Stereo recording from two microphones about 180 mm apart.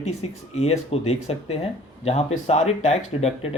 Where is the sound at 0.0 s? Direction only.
35° left (ahead or behind).